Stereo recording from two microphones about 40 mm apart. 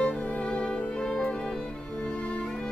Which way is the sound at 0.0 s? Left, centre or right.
Left.